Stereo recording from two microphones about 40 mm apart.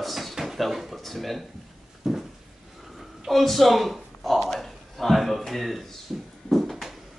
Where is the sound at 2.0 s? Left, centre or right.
Centre.